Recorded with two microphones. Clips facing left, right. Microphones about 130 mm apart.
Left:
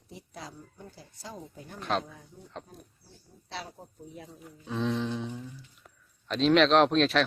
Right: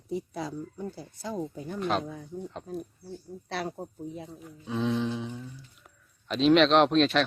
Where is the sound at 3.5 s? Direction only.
60° right (ahead or behind).